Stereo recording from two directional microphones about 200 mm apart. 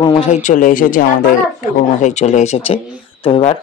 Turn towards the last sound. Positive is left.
turn(degrees=25)  # may be behind; listen again after turning